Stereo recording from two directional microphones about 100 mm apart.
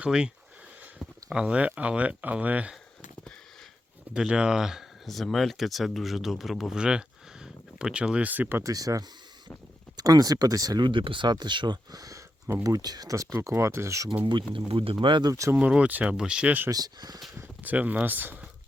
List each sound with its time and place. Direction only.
0.0 s speech: 10° right (ahead or behind)
4.1 s speech: 10° right (ahead or behind)
8.6 s speech: 35° right (ahead or behind)
14.3 s speech: 55° right (ahead or behind)
15.3 s speech: 30° right (ahead or behind)
15.5 s speech: 15° right (ahead or behind)
16.6 s speech: 40° right (ahead or behind)
17.6 s speech: 15° right (ahead or behind)